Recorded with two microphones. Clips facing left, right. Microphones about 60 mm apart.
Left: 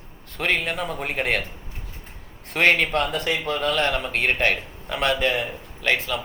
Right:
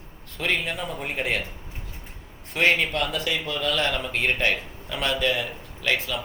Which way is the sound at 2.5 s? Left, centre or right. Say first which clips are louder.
Left 3 dB; left.